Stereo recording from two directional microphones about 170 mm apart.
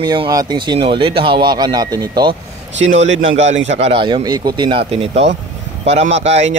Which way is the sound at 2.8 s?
45° right (ahead or behind).